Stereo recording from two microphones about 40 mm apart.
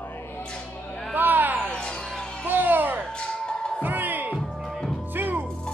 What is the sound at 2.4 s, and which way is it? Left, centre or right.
Music, right.